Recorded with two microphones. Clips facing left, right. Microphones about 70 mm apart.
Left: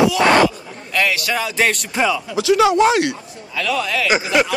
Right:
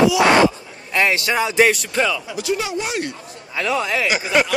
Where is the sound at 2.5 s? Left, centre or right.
Left.